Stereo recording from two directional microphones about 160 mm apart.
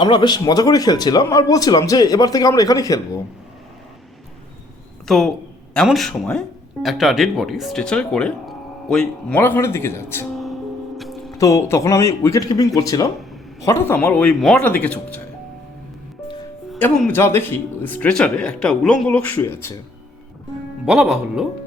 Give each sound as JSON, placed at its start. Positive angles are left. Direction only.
{"t": 0.0, "sound": "speech", "side_deg": 30}
{"t": 5.0, "sound": "speech", "side_deg": 0}
{"t": 10.3, "sound": "music", "side_deg": 0}
{"t": 11.3, "sound": "speech", "side_deg": 20}
{"t": 16.7, "sound": "speech", "side_deg": 10}
{"t": 20.8, "sound": "speech", "side_deg": 0}